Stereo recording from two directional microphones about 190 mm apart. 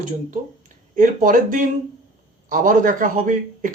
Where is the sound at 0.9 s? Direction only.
45° right (ahead or behind).